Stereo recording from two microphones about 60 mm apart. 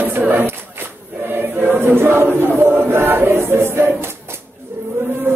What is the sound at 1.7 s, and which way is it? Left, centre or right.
Chant, right.